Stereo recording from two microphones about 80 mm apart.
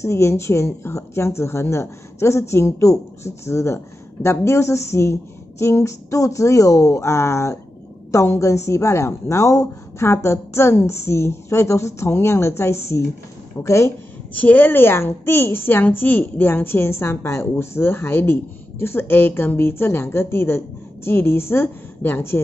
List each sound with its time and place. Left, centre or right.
0.0 s speech: left
14.3 s a woman's voice: left